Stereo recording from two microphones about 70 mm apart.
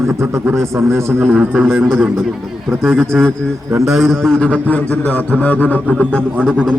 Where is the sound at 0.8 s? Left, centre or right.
Right.